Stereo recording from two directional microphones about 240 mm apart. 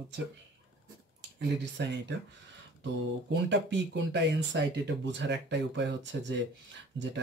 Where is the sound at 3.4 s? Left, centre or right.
Right.